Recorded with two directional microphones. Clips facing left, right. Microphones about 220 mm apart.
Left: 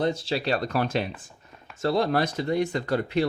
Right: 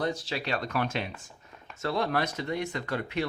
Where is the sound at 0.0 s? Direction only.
25° left (ahead or behind).